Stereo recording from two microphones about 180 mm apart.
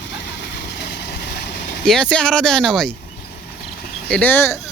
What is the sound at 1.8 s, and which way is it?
Speech, 5° left (ahead or behind).